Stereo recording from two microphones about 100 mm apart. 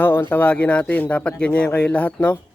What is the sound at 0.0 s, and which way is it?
Speech, 20° left (ahead or behind).